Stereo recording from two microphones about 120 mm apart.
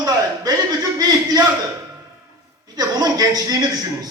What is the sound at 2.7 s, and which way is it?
A man's voice, 30° right (ahead or behind).